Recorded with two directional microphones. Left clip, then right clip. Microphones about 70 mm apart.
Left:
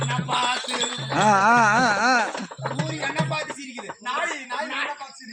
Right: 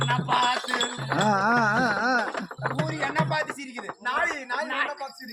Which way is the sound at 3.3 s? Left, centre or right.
Centre.